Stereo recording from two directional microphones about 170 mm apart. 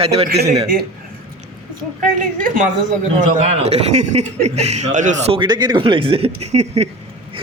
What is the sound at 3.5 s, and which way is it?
Speech, 40° right (ahead or behind).